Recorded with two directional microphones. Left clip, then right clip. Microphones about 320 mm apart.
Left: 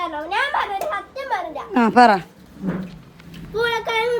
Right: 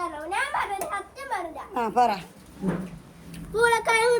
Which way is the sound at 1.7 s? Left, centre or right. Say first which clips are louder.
Left 9 dB; left.